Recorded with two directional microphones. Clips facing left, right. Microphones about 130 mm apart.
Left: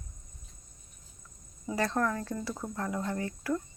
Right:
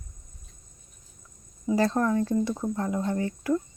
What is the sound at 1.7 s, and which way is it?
Speech, 25° right (ahead or behind).